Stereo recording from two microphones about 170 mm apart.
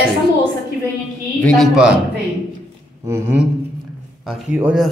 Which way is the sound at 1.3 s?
5° left (ahead or behind).